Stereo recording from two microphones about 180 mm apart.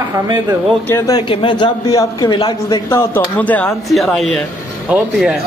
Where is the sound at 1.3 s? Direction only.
30° left (ahead or behind).